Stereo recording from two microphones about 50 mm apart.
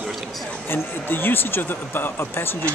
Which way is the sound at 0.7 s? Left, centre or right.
Left.